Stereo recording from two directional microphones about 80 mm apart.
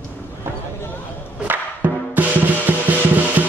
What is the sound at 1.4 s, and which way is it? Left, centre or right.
Music, right.